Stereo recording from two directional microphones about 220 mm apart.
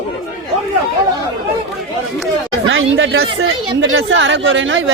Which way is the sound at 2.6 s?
60° right (ahead or behind).